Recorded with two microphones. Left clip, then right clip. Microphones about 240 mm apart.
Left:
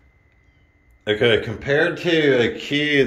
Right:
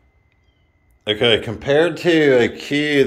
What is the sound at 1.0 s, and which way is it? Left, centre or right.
Speech, centre.